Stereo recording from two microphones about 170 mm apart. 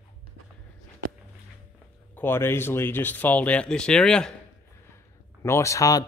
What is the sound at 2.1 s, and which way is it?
Speech, 15° left (ahead or behind).